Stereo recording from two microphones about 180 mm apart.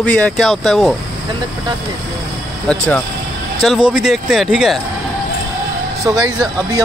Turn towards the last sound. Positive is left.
turn(degrees=-20)  # may be behind; listen again after turning